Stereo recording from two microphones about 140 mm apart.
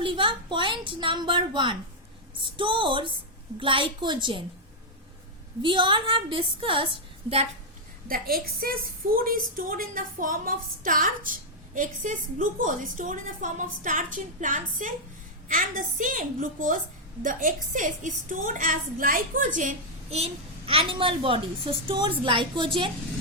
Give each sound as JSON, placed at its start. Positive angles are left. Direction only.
{"t": 0.0, "sound": "a child's voice", "side_deg": -35}
{"t": 5.6, "sound": "a child's voice", "side_deg": -35}
{"t": 8.0, "sound": "a woman's voice", "side_deg": -90}
{"t": 20.1, "sound": "a child's voice", "side_deg": -50}